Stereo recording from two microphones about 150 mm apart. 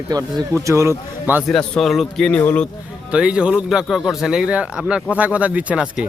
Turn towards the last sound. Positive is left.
turn(degrees=-5)  # may be behind; listen again after turning